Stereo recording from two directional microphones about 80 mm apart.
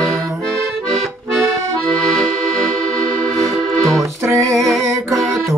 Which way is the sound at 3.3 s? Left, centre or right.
Centre.